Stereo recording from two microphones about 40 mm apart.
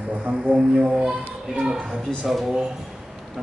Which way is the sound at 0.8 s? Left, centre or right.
Centre.